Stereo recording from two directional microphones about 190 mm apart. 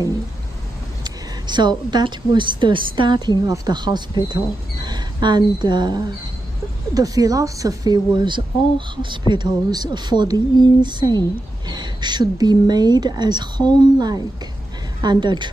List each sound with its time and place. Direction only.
1.0 s a woman's voice: 20° right (ahead or behind)